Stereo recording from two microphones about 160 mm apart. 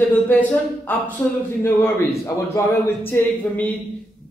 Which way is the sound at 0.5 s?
10° left (ahead or behind).